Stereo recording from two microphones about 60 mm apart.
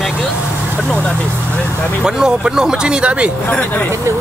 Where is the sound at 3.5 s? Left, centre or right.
Left.